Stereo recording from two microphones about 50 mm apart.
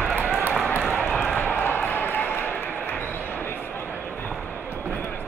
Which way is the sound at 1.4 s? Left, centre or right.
Left.